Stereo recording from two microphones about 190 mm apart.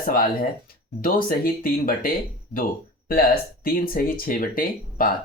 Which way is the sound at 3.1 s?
50° left (ahead or behind).